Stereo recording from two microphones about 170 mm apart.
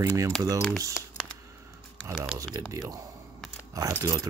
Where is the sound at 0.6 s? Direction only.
5° left (ahead or behind).